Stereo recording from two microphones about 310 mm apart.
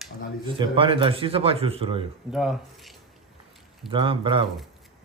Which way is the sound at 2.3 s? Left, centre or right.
Centre.